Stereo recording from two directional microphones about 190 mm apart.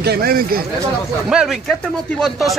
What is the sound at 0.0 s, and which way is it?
Speech, 55° right (ahead or behind).